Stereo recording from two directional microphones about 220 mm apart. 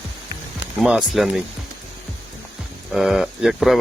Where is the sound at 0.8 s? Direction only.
Centre (ahead or behind).